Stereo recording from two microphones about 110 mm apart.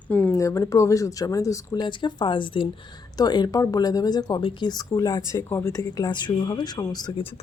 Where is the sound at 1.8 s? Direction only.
45° left (ahead or behind).